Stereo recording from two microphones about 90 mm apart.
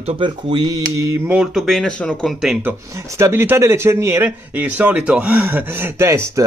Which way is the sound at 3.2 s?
30° right (ahead or behind).